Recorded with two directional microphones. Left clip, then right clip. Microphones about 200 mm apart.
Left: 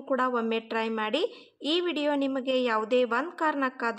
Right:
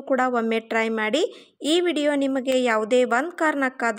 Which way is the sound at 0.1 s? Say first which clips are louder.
Right 5 dB; 25° right (ahead or behind).